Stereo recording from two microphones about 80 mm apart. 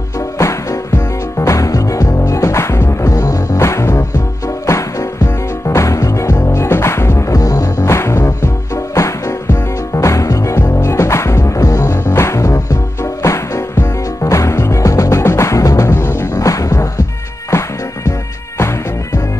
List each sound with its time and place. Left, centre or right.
0.4 s music: left
12.0 s music: left